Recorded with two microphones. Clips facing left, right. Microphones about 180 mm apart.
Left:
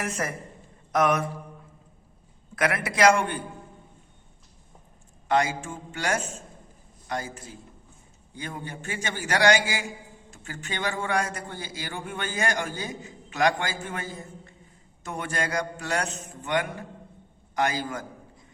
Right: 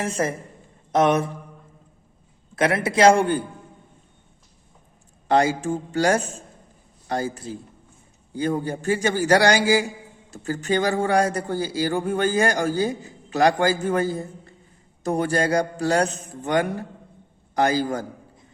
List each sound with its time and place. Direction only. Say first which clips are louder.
0.0 s a man's voice: right 6 dB; 25° right (ahead or behind)
2.6 s a man's voice: right 5 dB; 25° right (ahead or behind)
5.3 s speech: right 5 dB; 35° right (ahead or behind)